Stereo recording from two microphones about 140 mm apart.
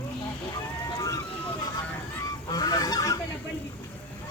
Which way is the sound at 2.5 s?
25° left (ahead or behind).